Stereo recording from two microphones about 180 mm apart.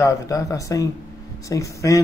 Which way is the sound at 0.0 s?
20° left (ahead or behind).